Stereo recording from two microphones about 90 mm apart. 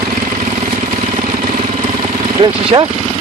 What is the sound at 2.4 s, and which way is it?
Speech, 60° right (ahead or behind).